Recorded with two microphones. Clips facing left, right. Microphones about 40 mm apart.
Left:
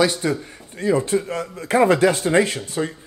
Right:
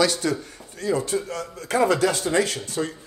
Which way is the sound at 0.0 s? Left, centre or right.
Centre.